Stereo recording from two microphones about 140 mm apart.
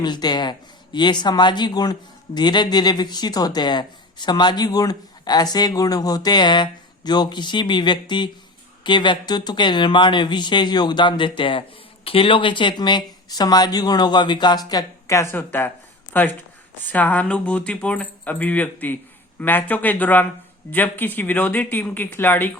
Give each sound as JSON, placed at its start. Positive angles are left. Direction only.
{"t": 0.0, "sound": "speech", "side_deg": 30}